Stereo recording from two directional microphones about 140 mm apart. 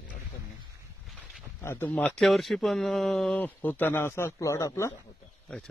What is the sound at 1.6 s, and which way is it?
Speech, 15° left (ahead or behind).